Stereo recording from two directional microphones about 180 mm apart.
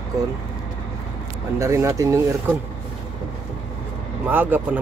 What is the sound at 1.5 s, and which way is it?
Speech, 15° right (ahead or behind).